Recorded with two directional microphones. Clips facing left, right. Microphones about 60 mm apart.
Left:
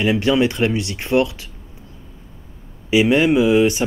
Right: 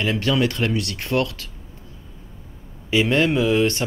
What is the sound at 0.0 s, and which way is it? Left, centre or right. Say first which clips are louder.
Speech: left 4 dB; centre.